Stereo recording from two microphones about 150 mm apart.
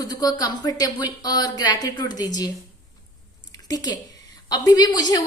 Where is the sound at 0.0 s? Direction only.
25° left (ahead or behind).